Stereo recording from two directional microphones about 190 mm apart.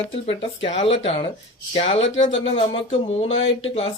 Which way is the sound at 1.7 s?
30° left (ahead or behind).